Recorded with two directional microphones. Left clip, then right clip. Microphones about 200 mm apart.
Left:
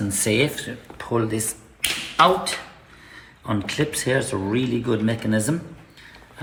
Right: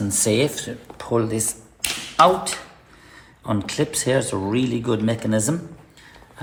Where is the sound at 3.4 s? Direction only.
40° right (ahead or behind).